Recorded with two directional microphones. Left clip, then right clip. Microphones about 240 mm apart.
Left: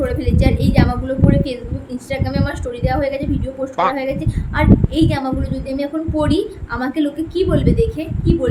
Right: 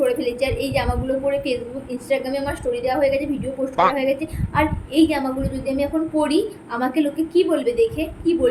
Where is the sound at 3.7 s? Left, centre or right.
Centre.